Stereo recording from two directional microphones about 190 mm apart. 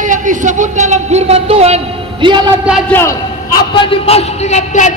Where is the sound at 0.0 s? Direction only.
40° right (ahead or behind); by 2.5 s 25° right (ahead or behind).